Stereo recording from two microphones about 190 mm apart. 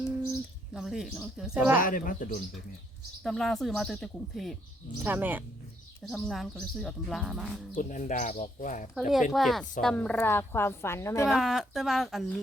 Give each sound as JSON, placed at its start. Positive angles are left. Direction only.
{"t": 0.7, "sound": "speech", "side_deg": 0}
{"t": 1.8, "sound": "speech", "side_deg": 45}
{"t": 3.2, "sound": "speech", "side_deg": 0}
{"t": 7.8, "sound": "speech", "side_deg": 40}
{"t": 9.0, "sound": "a woman's voice", "side_deg": 0}
{"t": 11.3, "sound": "speech", "side_deg": 0}